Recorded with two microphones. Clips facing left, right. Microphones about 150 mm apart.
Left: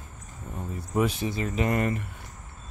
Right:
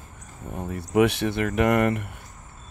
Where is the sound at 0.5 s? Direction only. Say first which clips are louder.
Right 6 dB; 70° right (ahead or behind).